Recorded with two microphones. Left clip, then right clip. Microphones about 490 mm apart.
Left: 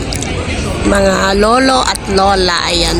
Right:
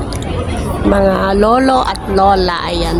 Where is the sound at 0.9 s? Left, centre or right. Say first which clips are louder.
Left 1 dB; right.